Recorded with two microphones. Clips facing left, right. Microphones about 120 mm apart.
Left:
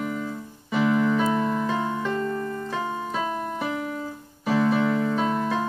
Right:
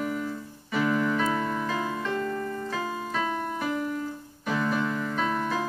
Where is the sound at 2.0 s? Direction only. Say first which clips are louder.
Left 3 dB; 35° left (ahead or behind).